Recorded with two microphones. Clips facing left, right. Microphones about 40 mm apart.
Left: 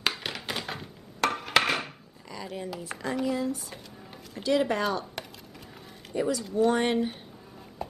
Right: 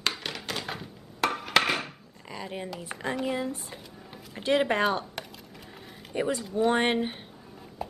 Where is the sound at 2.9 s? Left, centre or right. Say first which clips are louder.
Even; centre.